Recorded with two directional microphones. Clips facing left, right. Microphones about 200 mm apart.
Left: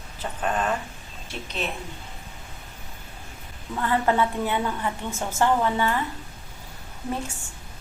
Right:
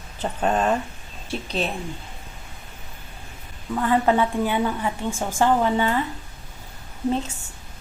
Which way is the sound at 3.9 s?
15° right (ahead or behind).